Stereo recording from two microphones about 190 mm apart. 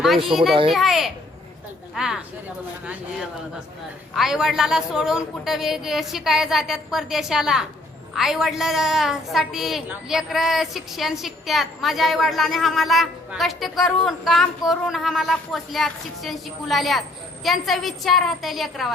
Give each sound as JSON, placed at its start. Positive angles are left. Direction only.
{"t": 0.3, "sound": "a woman's voice", "side_deg": 0}